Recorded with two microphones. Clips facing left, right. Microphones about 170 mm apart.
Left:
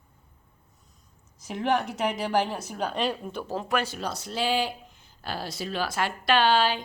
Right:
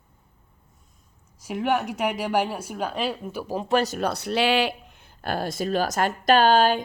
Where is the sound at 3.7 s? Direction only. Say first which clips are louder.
Right 6 dB; 35° right (ahead or behind).